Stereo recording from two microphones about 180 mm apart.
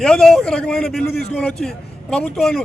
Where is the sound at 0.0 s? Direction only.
5° left (ahead or behind).